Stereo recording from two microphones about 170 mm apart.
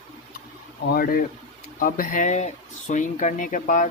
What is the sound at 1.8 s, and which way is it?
Speech, 55° left (ahead or behind).